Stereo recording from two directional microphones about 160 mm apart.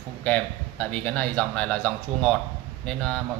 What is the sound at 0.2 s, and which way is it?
A man's voice, 10° left (ahead or behind).